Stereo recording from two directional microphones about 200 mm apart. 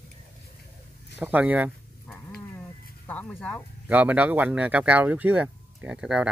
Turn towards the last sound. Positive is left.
turn(degrees=-5)  # may be behind; listen again after turning